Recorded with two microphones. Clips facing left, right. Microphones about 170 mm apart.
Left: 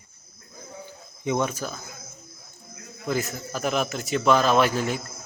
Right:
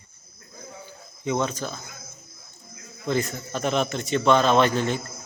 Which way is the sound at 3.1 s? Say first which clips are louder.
Right 2 dB; 5° left (ahead or behind).